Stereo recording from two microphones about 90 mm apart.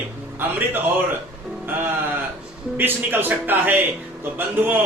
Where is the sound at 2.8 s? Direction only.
20° right (ahead or behind).